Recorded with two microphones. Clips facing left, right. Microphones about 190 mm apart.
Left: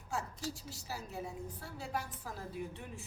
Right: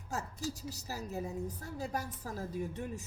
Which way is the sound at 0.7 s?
40° right (ahead or behind).